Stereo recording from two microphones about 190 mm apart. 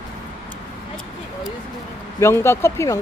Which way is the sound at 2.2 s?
15° left (ahead or behind).